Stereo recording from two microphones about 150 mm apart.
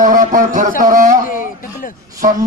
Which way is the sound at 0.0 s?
60° right (ahead or behind).